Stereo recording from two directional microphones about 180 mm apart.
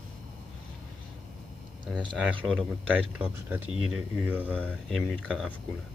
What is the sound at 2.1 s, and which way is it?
Speech, centre (ahead or behind).